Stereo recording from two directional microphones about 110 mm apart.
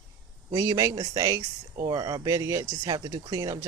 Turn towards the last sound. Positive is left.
turn(degrees=-30)  # may be behind; listen again after turning